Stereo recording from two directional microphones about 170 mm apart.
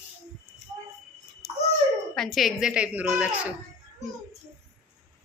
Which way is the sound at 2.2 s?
Centre (ahead or behind).